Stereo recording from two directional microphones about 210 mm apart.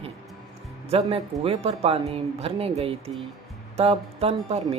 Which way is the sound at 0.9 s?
30° right (ahead or behind).